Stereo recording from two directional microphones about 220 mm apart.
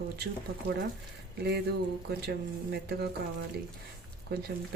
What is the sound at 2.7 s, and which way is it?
Speech, 50° right (ahead or behind).